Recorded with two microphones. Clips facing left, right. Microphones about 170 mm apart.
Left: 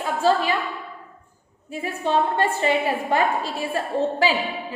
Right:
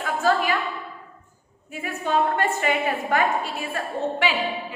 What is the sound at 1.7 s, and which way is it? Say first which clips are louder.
A woman's voice: left 2 dB; 30° left (ahead or behind).